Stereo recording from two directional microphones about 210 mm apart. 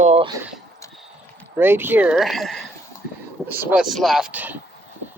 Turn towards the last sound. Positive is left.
turn(degrees=-5)  # may be behind; listen again after turning